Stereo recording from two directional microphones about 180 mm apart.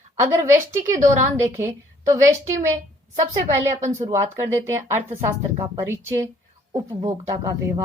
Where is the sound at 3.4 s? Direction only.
15° right (ahead or behind).